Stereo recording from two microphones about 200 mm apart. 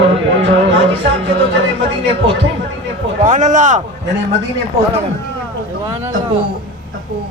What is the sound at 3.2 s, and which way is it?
Speech, 40° right (ahead or behind).